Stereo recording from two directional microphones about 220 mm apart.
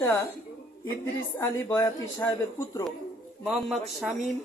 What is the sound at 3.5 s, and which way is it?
Speech, centre (ahead or behind).